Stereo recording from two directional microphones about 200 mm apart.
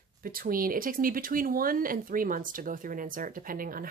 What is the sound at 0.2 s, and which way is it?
Speech, 45° right (ahead or behind).